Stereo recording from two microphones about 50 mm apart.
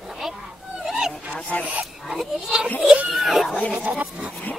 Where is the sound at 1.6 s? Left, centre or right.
Right.